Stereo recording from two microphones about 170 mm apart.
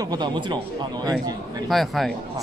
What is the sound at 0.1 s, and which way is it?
Speech, 25° right (ahead or behind).